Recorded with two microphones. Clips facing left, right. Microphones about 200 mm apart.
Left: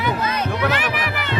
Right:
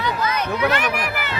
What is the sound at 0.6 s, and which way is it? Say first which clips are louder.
Music: right 3 dB; 5° left (ahead or behind).